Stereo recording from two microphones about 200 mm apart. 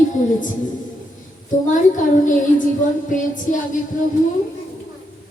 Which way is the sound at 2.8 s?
40° left (ahead or behind).